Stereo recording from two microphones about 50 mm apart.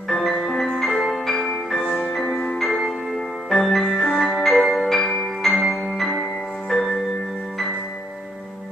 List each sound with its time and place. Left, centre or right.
0.1 s music: centre
2.2 s music: left
3.4 s music: centre
5.6 s music: centre
6.7 s music: centre